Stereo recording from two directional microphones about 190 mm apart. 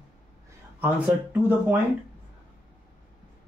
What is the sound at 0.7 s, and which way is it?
Speech, 10° right (ahead or behind).